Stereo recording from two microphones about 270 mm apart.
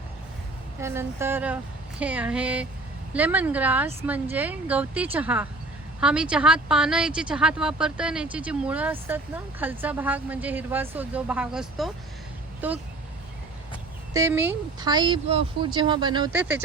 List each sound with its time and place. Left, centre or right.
0.8 s a woman's voice: centre
14.1 s speech: centre
16.3 s speech: centre